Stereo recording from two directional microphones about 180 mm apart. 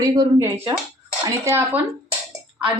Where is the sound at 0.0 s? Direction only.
20° right (ahead or behind).